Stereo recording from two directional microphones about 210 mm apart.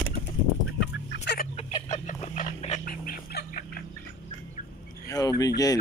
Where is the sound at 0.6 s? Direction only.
60° left (ahead or behind).